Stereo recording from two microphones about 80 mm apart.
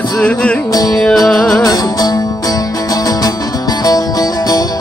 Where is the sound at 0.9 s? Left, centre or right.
Centre.